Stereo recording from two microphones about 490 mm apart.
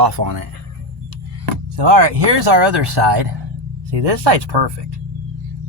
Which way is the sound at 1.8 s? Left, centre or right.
Right.